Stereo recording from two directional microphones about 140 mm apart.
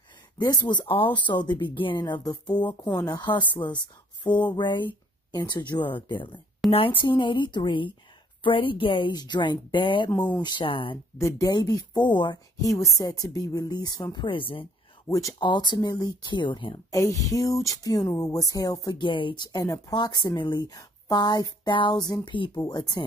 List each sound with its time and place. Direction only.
0.4 s speech: 30° left (ahead or behind)
4.2 s a sound: 35° left (ahead or behind)
4.6 s speech: 35° left (ahead or behind)
6.6 s a woman's voice: centre (ahead or behind)
7.0 s speech: 35° left (ahead or behind)
10.1 s speech: 10° left (ahead or behind)
10.4 s speech: 35° left (ahead or behind)
11.1 s a woman's voice: 25° left (ahead or behind)
12.7 s a woman's voice: 25° left (ahead or behind)
15.0 s speech: 25° left (ahead or behind)
16.9 s a woman's voice: 25° left (ahead or behind)
22.6 s a woman's voice: 25° left (ahead or behind)